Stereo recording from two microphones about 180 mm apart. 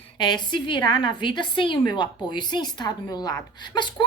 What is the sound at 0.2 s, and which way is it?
A woman's voice, 25° left (ahead or behind).